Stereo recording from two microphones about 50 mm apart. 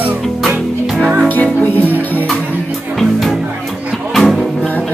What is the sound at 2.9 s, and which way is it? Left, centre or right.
Music, centre.